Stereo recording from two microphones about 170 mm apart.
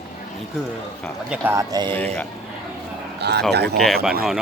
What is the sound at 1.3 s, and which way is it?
Speech, 15° right (ahead or behind).